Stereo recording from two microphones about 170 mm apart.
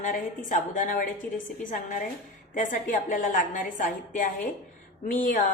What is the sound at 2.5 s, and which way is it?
Speech, 50° left (ahead or behind).